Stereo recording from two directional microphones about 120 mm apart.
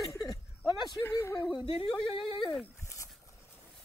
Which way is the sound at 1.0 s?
25° left (ahead or behind).